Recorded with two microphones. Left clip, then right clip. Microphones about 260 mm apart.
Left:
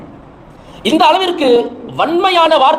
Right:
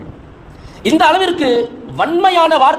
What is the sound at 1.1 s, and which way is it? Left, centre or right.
A man's voice, right.